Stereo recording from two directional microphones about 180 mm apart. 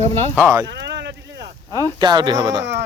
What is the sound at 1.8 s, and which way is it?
Speech, 25° right (ahead or behind).